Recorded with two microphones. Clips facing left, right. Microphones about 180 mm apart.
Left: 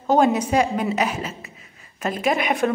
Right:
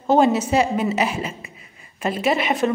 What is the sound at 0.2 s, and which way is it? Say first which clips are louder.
A woman's voice: right 1 dB; 5° right (ahead or behind).